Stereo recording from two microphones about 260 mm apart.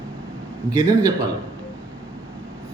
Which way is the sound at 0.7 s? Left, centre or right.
Centre.